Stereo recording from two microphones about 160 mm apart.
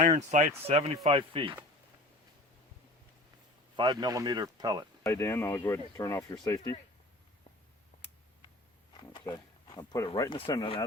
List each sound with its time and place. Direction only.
0.2 s speech: 45° right (ahead or behind)
0.7 s speech: 35° right (ahead or behind)
3.8 s a man's voice: 25° right (ahead or behind)
5.0 s speech: 15° left (ahead or behind)
8.9 s a sound: 30° left (ahead or behind)
10.2 s speech: 35° left (ahead or behind)